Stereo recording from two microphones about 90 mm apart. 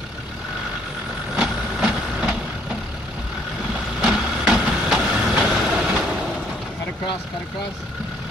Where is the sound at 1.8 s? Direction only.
10° right (ahead or behind).